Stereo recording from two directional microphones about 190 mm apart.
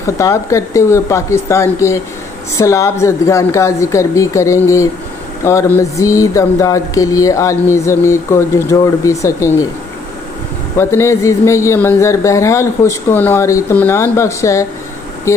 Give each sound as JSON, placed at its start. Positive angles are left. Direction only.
{"t": 0.0, "sound": "speech", "side_deg": 15}
{"t": 10.8, "sound": "speech", "side_deg": 15}